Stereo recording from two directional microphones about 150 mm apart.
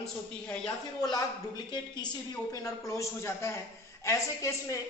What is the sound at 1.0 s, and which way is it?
A woman's voice, 25° left (ahead or behind).